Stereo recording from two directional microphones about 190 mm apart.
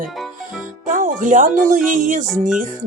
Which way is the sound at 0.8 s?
45° right (ahead or behind).